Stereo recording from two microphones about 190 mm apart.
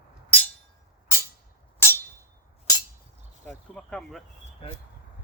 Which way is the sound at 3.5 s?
5° left (ahead or behind).